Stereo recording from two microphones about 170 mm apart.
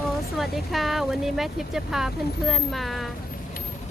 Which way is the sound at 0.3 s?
Centre (ahead or behind).